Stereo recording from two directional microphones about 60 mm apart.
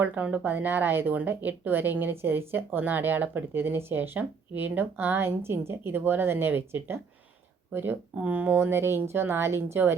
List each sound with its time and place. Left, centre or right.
0.0 s a woman's voice: right